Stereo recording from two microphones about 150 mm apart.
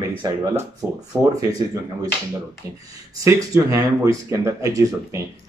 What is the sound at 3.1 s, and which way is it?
Speech, 20° right (ahead or behind).